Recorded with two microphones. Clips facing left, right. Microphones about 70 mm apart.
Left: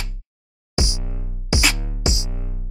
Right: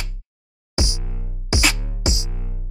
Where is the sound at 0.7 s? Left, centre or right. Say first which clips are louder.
Left 1 dB; left.